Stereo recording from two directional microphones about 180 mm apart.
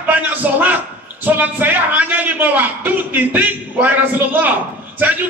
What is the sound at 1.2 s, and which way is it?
A man's voice, 10° right (ahead or behind).